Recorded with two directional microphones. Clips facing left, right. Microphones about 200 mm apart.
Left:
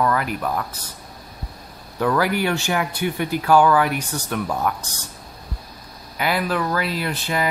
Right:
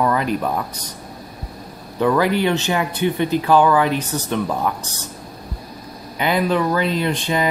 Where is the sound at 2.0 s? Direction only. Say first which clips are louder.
Right 3 dB; 20° right (ahead or behind).